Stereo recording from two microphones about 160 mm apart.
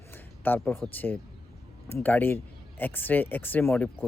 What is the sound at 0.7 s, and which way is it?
Speech, 15° left (ahead or behind).